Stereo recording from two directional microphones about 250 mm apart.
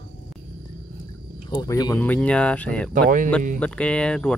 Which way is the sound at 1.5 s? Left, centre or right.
Centre.